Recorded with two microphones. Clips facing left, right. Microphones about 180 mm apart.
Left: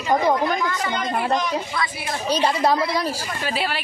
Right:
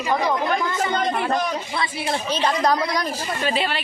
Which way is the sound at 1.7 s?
25° right (ahead or behind).